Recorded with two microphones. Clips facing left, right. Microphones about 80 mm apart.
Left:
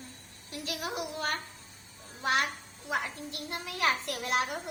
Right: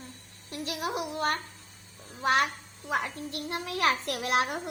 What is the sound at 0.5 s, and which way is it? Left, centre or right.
Speech, right.